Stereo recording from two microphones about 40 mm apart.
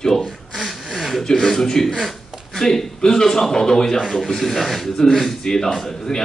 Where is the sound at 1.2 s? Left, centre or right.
Centre.